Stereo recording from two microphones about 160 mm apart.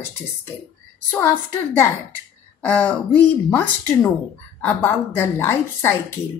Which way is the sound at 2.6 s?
10° left (ahead or behind).